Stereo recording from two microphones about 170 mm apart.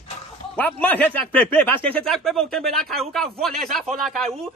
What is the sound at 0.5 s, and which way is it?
Speech, 10° left (ahead or behind).